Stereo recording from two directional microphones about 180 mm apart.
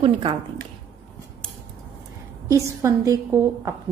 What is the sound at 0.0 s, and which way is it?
Speech, 30° right (ahead or behind).